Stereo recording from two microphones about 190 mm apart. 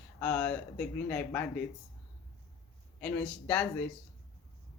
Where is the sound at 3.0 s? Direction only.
5° left (ahead or behind).